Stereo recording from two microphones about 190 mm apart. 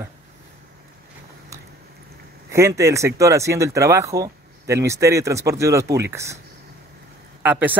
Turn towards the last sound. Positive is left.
turn(degrees=-10)  # may be behind; listen again after turning